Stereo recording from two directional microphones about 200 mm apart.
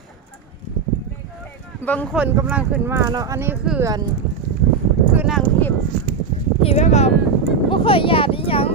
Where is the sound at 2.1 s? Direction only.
10° right (ahead or behind).